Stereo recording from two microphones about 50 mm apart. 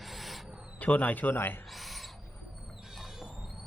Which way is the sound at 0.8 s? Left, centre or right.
Left.